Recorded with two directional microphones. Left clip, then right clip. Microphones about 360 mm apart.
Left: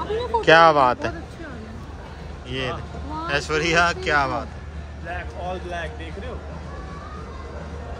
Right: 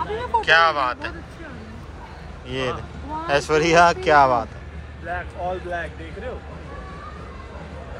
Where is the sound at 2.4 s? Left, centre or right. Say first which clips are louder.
Right 2 dB; centre.